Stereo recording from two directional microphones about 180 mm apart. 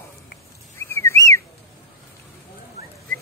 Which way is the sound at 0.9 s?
15° left (ahead or behind).